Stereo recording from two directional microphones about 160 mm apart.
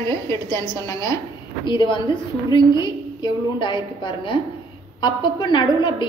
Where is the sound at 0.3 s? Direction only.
20° left (ahead or behind).